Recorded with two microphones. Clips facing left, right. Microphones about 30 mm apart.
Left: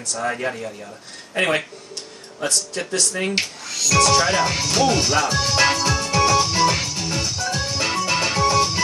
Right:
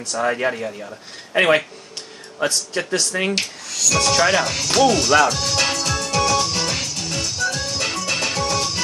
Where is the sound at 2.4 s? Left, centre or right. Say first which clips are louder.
Right 3 dB; right.